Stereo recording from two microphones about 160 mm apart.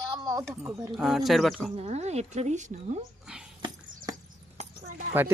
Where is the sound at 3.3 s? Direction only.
5° right (ahead or behind).